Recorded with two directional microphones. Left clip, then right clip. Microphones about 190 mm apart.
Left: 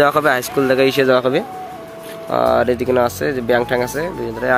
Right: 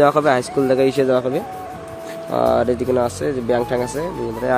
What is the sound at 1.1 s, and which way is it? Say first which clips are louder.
Speech: left 4 dB; 15° left (ahead or behind).